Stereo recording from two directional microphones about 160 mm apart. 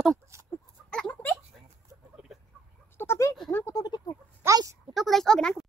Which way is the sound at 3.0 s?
15° left (ahead or behind).